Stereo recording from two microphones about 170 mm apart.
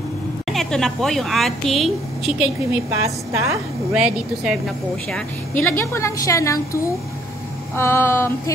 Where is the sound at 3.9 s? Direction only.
5° right (ahead or behind).